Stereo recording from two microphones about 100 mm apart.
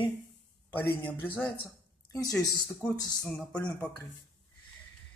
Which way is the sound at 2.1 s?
35° left (ahead or behind).